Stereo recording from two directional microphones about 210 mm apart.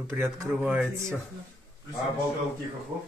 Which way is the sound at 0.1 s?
10° right (ahead or behind).